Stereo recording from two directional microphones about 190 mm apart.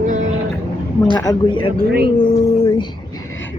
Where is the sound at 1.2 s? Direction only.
20° left (ahead or behind).